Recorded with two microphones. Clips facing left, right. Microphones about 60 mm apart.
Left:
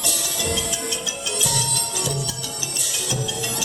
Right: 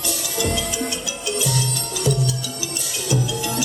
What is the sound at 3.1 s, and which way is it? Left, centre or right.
Music, right.